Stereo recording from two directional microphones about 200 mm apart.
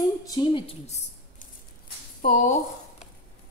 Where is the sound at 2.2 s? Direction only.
40° left (ahead or behind).